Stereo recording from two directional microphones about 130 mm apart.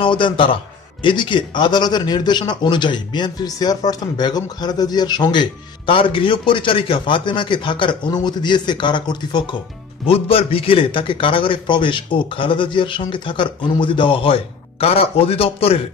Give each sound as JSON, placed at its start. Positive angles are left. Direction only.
{"t": 0.0, "sound": "speech", "side_deg": 40}
{"t": 10.0, "sound": "speech", "side_deg": 45}